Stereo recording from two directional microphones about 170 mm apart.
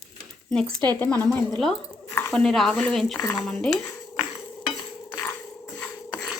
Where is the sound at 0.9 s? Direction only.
10° left (ahead or behind).